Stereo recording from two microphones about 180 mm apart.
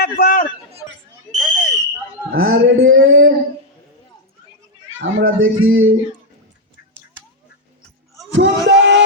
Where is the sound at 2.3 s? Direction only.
90° right.